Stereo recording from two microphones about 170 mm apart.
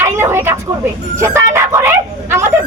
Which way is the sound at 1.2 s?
15° right (ahead or behind).